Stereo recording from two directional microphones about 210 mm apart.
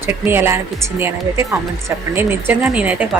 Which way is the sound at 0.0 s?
10° right (ahead or behind).